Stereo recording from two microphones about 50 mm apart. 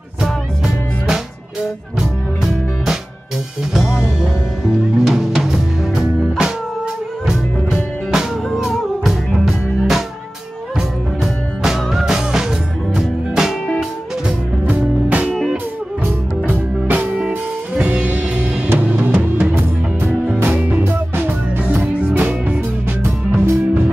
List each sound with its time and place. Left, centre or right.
2.0 s music: centre
5.0 s music: centre
5.9 s music: centre
11.6 s music: centre
14.7 s music: right
16.4 s music: right
20.5 s music: right
20.8 s music: right
23.0 s music: right